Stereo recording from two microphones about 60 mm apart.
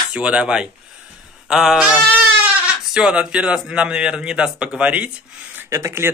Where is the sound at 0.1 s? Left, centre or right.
Centre.